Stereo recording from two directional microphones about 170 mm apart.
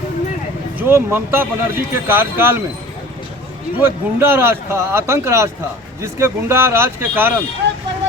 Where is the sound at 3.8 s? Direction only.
15° right (ahead or behind).